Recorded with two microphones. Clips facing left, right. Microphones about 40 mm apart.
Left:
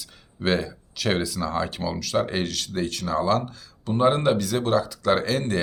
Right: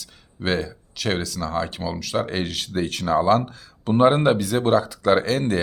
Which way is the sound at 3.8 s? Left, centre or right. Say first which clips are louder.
Right 5 dB; right.